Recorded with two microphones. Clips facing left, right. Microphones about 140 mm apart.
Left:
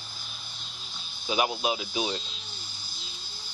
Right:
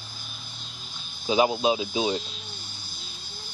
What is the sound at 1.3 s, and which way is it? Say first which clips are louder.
Speech: right 6 dB; 25° right (ahead or behind).